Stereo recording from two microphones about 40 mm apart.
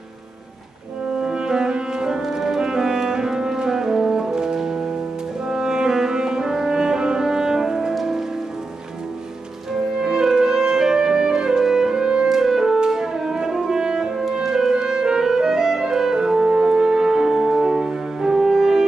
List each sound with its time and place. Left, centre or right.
1.2 s music: centre
10.0 s music: centre
12.3 s music: centre
14.4 s clarinet: centre